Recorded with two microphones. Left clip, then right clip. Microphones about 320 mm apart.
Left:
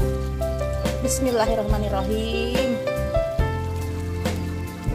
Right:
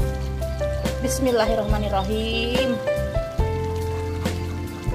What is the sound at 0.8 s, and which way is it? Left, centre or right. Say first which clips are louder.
Speech: even; centre.